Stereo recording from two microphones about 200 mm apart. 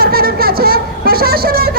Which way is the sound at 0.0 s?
50° right (ahead or behind).